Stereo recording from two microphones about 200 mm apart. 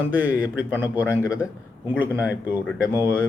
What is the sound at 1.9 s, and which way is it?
Speech, 10° right (ahead or behind).